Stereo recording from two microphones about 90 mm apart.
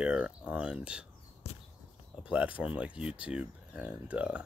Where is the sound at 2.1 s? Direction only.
15° right (ahead or behind).